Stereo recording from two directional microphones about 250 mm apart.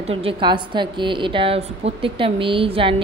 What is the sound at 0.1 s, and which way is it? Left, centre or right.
A woman's voice, right.